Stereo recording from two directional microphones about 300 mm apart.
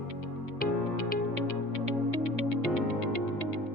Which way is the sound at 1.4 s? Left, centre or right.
Right.